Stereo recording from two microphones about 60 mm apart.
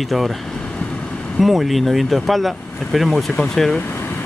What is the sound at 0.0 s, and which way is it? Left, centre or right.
Speech, centre.